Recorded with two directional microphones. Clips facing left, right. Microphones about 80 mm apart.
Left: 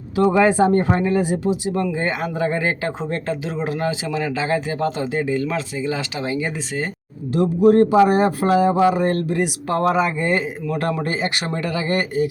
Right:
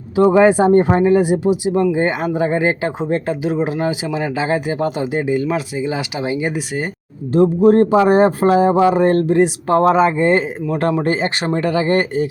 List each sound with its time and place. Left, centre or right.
0.2 s speech: right
7.3 s speech: right